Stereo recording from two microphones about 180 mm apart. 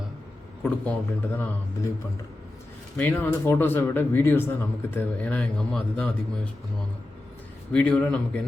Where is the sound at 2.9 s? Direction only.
10° left (ahead or behind).